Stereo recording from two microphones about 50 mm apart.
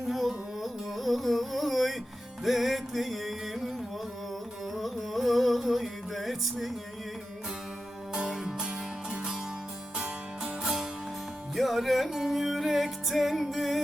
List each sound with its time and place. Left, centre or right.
0.1 s carnatic music: centre
2.4 s music: centre
8.1 s music: centre